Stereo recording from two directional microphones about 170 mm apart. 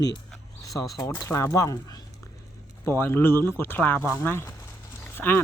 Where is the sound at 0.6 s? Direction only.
20° left (ahead or behind).